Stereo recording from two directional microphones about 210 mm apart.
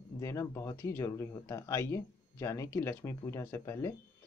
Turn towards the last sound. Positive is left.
turn(degrees=15)  # may be behind; listen again after turning